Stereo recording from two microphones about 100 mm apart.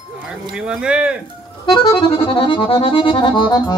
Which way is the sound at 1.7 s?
60° left (ahead or behind).